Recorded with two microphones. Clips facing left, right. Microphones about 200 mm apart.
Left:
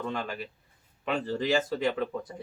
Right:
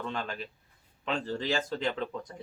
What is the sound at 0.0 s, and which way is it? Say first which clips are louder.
Speech: left 2 dB; 5° left (ahead or behind).